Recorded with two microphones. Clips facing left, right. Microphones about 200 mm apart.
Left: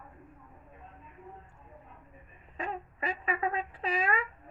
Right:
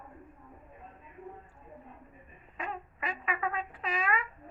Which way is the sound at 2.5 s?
30° left (ahead or behind).